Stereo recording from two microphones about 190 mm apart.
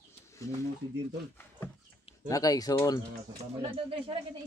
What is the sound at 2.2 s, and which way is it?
Speech, 20° left (ahead or behind).